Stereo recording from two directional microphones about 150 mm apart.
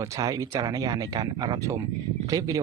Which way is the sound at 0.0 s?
20° right (ahead or behind).